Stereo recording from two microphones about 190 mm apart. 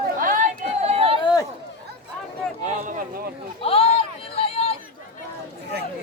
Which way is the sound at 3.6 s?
30° left (ahead or behind).